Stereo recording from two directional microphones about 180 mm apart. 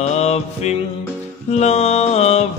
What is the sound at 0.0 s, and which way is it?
Mantra, 35° left (ahead or behind).